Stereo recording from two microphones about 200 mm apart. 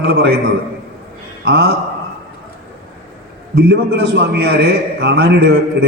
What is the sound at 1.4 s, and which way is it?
Speech, 60° right (ahead or behind).